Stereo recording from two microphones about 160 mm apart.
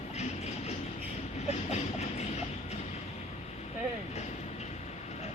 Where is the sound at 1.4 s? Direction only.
45° left (ahead or behind).